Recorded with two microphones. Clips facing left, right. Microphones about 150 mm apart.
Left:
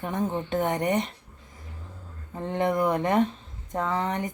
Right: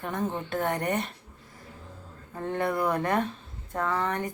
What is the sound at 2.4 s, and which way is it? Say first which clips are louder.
A woman's voice: left 3 dB; 20° left (ahead or behind).